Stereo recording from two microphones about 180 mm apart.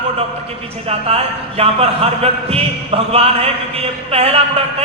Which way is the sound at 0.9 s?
35° right (ahead or behind).